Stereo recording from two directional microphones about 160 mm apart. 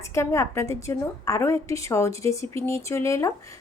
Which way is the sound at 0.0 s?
15° left (ahead or behind).